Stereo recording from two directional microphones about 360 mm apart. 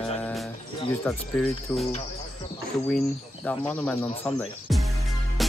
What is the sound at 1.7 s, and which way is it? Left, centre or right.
Speech, centre.